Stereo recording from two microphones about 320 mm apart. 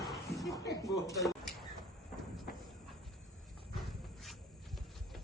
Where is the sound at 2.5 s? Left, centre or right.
Left.